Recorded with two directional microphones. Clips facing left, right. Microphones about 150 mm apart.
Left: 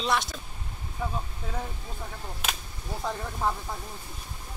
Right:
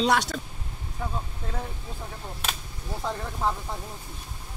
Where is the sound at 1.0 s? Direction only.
5° left (ahead or behind).